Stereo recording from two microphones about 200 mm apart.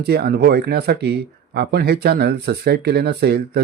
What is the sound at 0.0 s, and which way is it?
Speech, 50° right (ahead or behind).